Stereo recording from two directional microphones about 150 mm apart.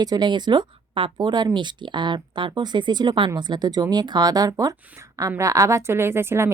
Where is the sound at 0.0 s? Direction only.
25° right (ahead or behind).